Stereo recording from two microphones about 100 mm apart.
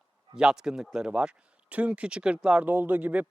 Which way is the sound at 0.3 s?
5° right (ahead or behind).